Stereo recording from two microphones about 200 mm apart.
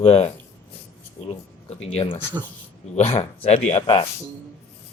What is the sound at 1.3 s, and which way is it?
Speech, 30° left (ahead or behind).